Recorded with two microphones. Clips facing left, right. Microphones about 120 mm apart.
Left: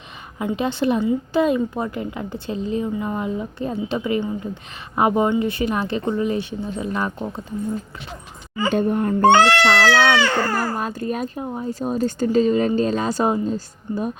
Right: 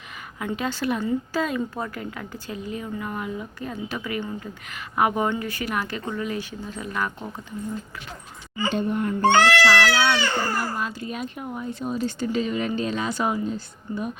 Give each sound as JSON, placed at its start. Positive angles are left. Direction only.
{"t": 0.3, "sound": "a woman's voice", "side_deg": 25}
{"t": 8.5, "sound": "speech", "side_deg": 45}
{"t": 9.9, "sound": "baby cry", "side_deg": 60}
{"t": 10.6, "sound": "speech", "side_deg": 45}